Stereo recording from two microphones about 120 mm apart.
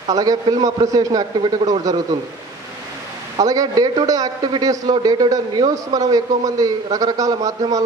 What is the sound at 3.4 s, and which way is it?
A man's voice, 30° right (ahead or behind).